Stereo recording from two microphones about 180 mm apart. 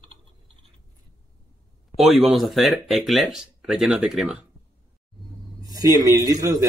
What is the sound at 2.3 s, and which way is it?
Speech, centre (ahead or behind).